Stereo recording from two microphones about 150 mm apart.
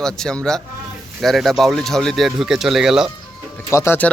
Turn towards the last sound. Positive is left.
turn(degrees=15)  # may be behind; listen again after turning